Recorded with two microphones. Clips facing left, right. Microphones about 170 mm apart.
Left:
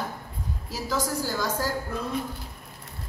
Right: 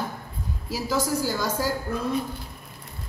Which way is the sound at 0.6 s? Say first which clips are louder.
Right 3 dB; 5° right (ahead or behind).